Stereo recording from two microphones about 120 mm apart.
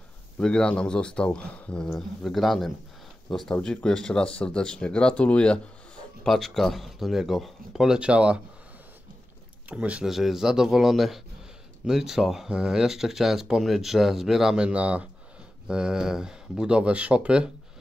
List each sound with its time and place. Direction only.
0.4 s speech: 5° left (ahead or behind); by 8.4 s 10° right (ahead or behind)
9.7 s speech: 10° right (ahead or behind)